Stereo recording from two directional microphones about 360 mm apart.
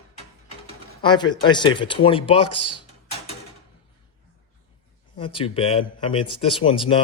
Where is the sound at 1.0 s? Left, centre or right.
Centre.